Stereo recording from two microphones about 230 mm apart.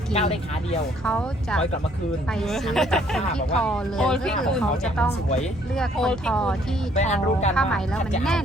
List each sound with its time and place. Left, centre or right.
0.1 s speech: left
1.0 s speech: centre
6.9 s speech: left
7.5 s speech: centre